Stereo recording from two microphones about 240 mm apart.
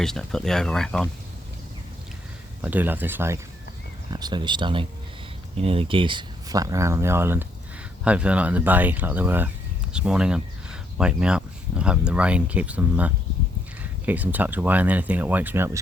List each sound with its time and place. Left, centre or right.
0.0 s speech: centre
2.6 s speech: centre